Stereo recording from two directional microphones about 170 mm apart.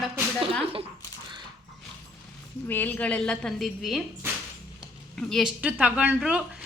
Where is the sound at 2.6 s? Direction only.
10° left (ahead or behind).